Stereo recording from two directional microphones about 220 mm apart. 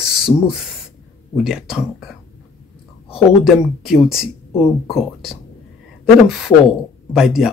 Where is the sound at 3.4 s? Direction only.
Centre (ahead or behind).